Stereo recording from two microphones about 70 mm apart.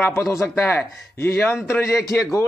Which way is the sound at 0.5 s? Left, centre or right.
Left.